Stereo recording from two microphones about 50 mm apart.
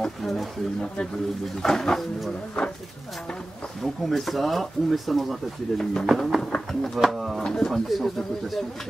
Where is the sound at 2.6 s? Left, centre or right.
Left.